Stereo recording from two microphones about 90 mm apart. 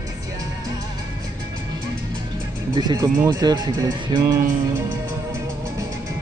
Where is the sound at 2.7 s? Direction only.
50° right (ahead or behind).